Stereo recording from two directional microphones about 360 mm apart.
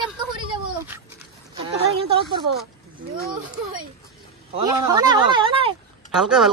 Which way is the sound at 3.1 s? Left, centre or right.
Right.